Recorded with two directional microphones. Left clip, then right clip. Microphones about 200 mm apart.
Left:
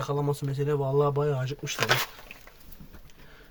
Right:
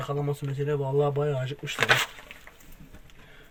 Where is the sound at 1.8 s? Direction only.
5° right (ahead or behind).